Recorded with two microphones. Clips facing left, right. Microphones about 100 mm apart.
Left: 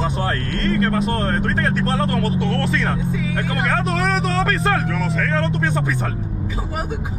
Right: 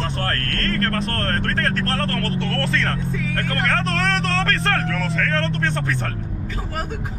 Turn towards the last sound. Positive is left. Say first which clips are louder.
# left 2 dB
turn(degrees=10)  # may be behind; listen again after turning